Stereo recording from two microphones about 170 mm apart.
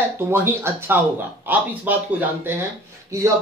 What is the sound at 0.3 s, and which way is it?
A man's voice, 15° right (ahead or behind).